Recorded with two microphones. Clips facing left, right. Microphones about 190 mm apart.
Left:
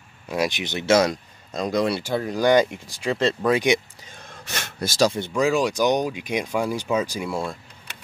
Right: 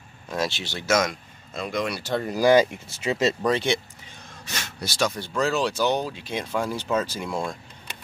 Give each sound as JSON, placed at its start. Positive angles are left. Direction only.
{"t": 0.3, "sound": "speech", "side_deg": 15}
{"t": 2.0, "sound": "speech", "side_deg": 5}
{"t": 3.4, "sound": "speech", "side_deg": 15}
{"t": 4.6, "sound": "speech", "side_deg": 55}
{"t": 5.3, "sound": "speech", "side_deg": 10}